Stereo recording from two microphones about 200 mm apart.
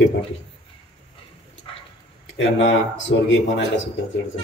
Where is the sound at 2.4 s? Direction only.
70° left (ahead or behind).